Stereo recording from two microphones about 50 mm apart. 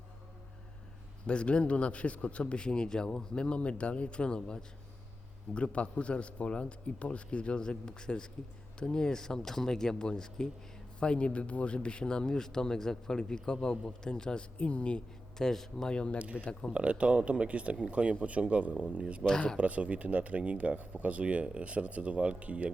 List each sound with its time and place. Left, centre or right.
1.3 s a man's voice: left
15.4 s speech: centre
15.9 s a man's voice: centre
16.1 s speech: right
16.4 s speech: centre
16.7 s speech: right
19.2 s speech: centre
19.5 s speech: right